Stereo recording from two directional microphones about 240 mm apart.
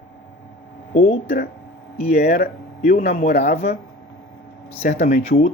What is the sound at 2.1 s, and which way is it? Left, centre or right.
Speech, left.